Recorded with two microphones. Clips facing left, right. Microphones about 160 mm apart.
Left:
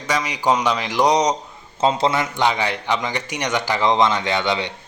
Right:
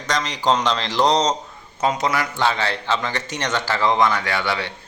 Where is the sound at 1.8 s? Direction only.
25° left (ahead or behind).